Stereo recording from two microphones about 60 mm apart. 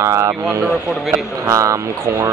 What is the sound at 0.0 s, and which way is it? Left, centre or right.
Speech, right.